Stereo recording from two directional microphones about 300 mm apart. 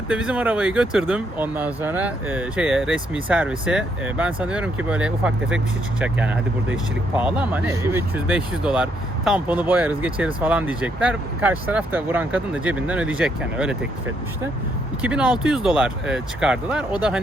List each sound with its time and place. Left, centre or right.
0.1 s speech: centre
15.0 s speech: centre